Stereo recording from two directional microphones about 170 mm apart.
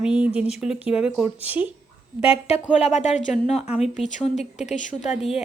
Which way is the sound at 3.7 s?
5° right (ahead or behind).